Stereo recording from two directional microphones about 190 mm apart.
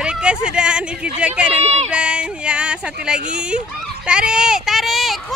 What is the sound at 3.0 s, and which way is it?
Speech, 5° right (ahead or behind).